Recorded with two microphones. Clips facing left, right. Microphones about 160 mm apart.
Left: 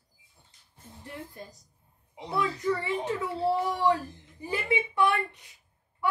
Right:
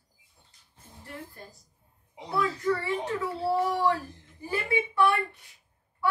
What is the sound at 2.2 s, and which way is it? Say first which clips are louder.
Speech: right 1 dB; 20° left (ahead or behind).